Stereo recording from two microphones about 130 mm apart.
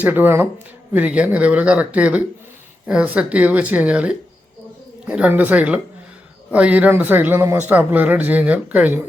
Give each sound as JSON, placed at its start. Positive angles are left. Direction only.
{"t": 0.0, "sound": "speech", "side_deg": -15}